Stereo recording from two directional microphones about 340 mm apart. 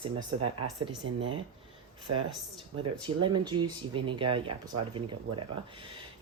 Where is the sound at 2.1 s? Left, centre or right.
Right.